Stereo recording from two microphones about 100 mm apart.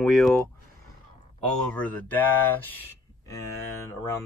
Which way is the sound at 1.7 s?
15° left (ahead or behind).